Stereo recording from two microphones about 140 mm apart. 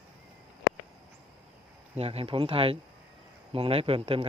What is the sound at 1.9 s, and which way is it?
Speech, 45° right (ahead or behind).